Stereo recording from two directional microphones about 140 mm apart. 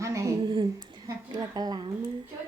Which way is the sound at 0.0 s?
20° right (ahead or behind).